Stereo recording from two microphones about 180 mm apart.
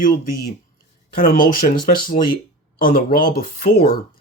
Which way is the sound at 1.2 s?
55° left (ahead or behind).